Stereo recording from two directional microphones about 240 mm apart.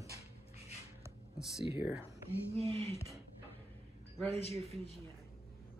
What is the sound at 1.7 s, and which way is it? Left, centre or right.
Speech, centre.